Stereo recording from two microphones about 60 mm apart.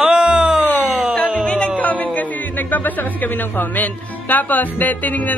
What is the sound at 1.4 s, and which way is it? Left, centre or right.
Music, centre.